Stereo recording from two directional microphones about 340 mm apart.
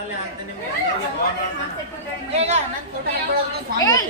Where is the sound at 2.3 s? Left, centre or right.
Centre.